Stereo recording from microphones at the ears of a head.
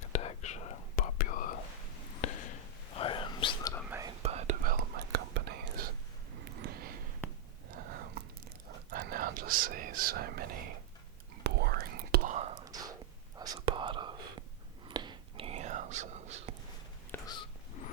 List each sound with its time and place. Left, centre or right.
0.0 s whispering: left
4.0 s whispering: right
17.2 s a sound: left